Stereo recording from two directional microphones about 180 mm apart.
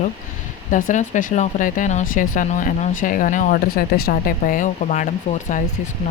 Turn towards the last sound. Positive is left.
turn(degrees=45)  # may be behind; listen again after turning